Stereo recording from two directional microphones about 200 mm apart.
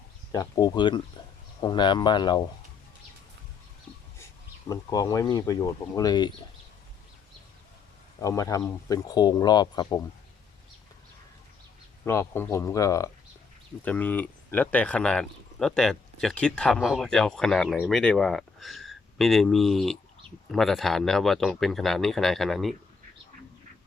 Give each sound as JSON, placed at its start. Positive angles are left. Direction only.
{"t": 0.3, "sound": "speech", "side_deg": 20}
{"t": 4.7, "sound": "speech", "side_deg": 15}
{"t": 8.2, "sound": "speech", "side_deg": 15}
{"t": 12.0, "sound": "speech", "side_deg": 10}